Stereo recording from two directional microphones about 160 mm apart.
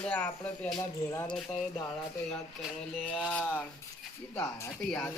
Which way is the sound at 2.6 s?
5° right (ahead or behind).